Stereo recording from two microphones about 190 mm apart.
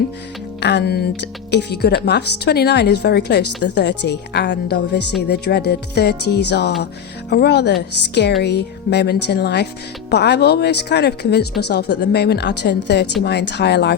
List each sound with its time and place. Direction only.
0.6 s a woman's voice: 60° left (ahead or behind)